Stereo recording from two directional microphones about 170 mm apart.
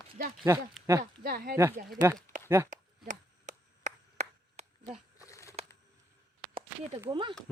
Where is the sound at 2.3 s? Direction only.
15° left (ahead or behind).